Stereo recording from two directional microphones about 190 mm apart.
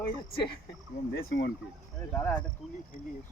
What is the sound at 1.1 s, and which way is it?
Speech, 50° left (ahead or behind).